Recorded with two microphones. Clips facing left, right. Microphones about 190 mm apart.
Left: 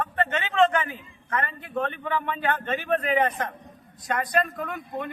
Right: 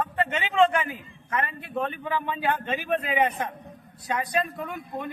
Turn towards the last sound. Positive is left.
turn(degrees=-5)  # may be behind; listen again after turning